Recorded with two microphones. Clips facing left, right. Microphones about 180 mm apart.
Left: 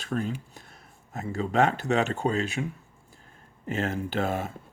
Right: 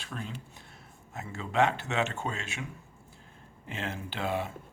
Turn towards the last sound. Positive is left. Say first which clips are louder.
# left 4 dB
turn(degrees=45)  # may be behind; listen again after turning